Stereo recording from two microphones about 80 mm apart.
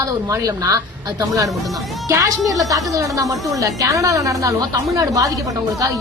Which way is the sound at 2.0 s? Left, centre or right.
Right.